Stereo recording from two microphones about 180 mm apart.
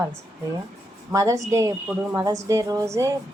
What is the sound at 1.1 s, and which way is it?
A woman's voice, 20° right (ahead or behind).